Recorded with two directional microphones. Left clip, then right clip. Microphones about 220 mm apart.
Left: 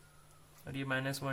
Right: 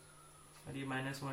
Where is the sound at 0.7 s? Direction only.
45° left (ahead or behind).